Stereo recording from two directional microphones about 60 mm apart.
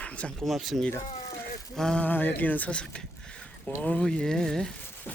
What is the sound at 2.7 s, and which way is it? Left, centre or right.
Speech, centre.